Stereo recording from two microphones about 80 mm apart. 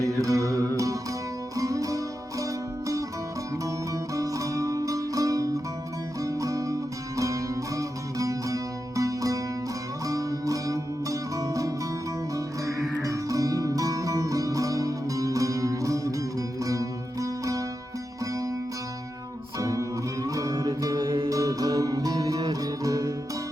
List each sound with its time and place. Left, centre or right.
0.0 s music: right
4.1 s music: right
13.0 s music: right
19.5 s music: right
21.0 s music: right
21.2 s music: right